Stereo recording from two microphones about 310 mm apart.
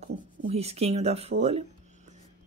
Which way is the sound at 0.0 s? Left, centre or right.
Centre.